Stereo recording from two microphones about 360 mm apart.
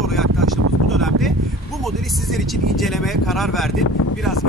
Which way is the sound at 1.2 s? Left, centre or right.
Centre.